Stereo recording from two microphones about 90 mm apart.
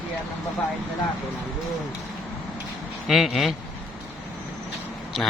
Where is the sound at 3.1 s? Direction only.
Centre (ahead or behind).